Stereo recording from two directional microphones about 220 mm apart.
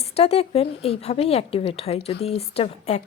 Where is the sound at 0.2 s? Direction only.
25° left (ahead or behind).